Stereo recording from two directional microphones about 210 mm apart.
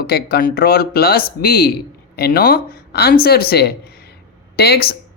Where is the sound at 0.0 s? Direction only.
50° left (ahead or behind).